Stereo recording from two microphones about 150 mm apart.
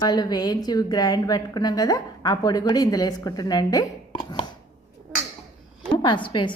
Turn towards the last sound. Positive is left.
turn(degrees=35)  # may be behind; listen again after turning